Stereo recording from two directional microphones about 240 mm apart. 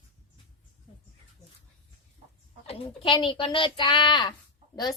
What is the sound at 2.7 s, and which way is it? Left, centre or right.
A woman's voice, left.